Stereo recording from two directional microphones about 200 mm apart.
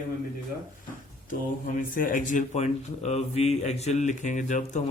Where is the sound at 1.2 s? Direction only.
40° left (ahead or behind).